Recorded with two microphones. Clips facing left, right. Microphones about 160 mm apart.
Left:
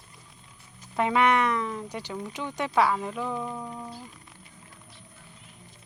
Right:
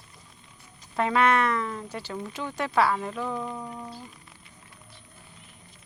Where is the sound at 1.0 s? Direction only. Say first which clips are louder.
Even; 15° left (ahead or behind); by 4.0 s centre (ahead or behind).